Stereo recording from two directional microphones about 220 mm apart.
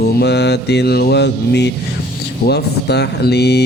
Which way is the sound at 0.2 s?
50° left (ahead or behind).